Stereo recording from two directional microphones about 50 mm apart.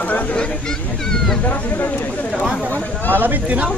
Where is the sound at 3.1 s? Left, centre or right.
Right.